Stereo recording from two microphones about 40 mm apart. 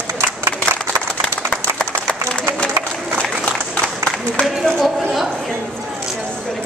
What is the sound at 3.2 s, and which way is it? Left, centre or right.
Applause, centre.